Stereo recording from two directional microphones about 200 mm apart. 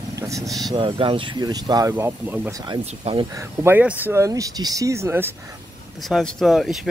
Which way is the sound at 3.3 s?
15° right (ahead or behind).